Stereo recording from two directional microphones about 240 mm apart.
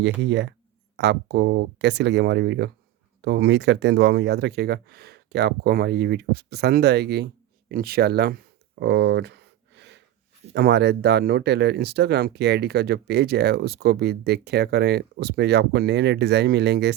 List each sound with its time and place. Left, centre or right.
0.0 s speech: right
7.7 s a sound: right
10.5 s speech: right